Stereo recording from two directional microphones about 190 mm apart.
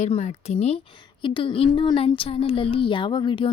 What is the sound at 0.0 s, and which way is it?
A woman's voice, 35° left (ahead or behind).